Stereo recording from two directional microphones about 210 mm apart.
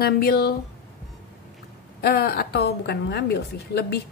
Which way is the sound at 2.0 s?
50° left (ahead or behind).